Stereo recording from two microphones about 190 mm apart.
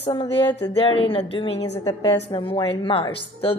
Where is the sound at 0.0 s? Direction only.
25° left (ahead or behind).